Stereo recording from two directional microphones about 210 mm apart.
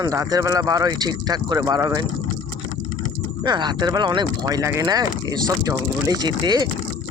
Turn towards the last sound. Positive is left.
turn(degrees=-20)  # may be behind; listen again after turning